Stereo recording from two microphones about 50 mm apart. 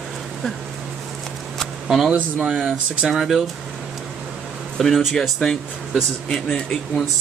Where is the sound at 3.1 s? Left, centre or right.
Centre.